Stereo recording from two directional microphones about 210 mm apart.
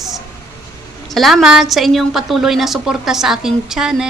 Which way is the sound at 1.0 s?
Centre (ahead or behind).